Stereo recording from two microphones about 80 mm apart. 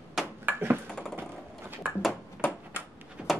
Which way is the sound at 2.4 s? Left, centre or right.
Centre.